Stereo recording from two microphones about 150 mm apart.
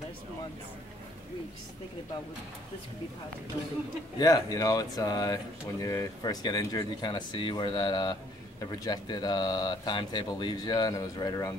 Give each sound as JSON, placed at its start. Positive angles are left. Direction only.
{"t": 4.2, "sound": "speech", "side_deg": 25}